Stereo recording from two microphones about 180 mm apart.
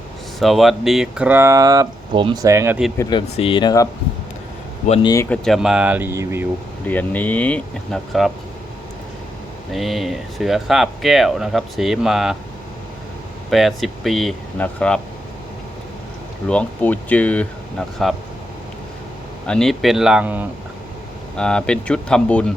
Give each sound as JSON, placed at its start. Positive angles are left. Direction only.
{"t": 0.3, "sound": "speech", "side_deg": 0}
{"t": 3.0, "sound": "speech", "side_deg": 25}
{"t": 5.0, "sound": "speech", "side_deg": 15}
{"t": 5.5, "sound": "speech", "side_deg": -5}
{"t": 6.8, "sound": "speech", "side_deg": 10}
{"t": 9.7, "sound": "speech", "side_deg": 0}
{"t": 13.5, "sound": "speech", "side_deg": 0}
{"t": 16.5, "sound": "speech", "side_deg": 10}
{"t": 19.5, "sound": "speech", "side_deg": 5}
{"t": 21.3, "sound": "speech", "side_deg": 5}